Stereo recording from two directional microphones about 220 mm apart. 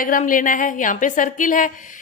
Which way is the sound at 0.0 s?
35° left (ahead or behind).